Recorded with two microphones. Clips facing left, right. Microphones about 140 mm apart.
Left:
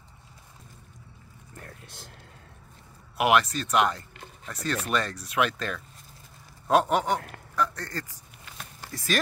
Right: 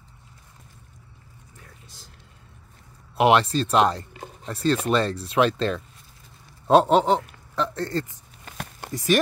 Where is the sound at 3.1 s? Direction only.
30° right (ahead or behind).